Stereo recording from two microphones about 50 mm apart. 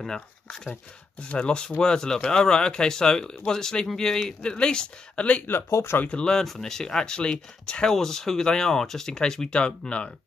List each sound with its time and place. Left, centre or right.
0.0 s speech: centre
5.7 s speech: left
6.0 s speech: centre
6.4 s speech: centre; by 10.1 s left